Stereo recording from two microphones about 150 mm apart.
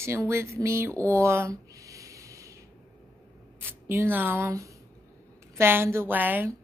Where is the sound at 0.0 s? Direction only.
15° right (ahead or behind).